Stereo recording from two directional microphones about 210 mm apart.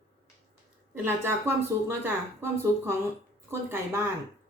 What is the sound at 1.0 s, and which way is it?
Speech, 10° right (ahead or behind).